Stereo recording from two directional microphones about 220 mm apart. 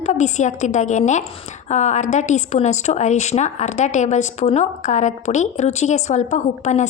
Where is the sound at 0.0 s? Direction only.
30° left (ahead or behind).